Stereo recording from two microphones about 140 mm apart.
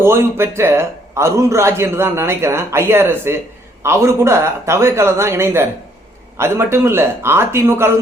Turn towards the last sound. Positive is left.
turn(degrees=-15)  # may be behind; listen again after turning